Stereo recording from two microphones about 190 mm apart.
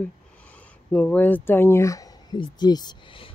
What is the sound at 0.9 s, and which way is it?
Speech, 10° left (ahead or behind).